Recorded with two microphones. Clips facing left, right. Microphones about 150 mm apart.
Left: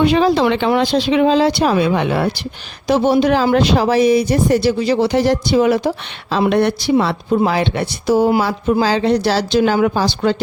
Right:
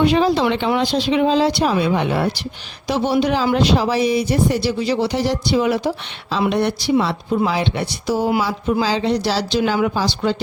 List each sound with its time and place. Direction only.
0.0 s speech: 70° left (ahead or behind)
2.8 s speech: 50° left (ahead or behind)
6.5 s speech: 60° left (ahead or behind)